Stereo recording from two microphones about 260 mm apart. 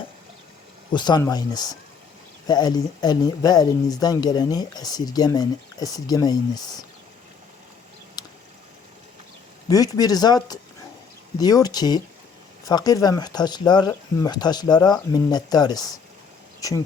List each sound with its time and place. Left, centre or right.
0.9 s speech: centre
8.2 s a sound: centre
9.6 s speech: centre